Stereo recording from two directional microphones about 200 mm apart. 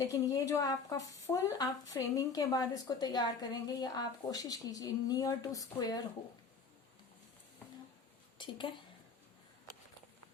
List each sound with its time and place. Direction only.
0.0 s a woman's voice: 15° left (ahead or behind)
8.4 s a woman's voice: 25° left (ahead or behind)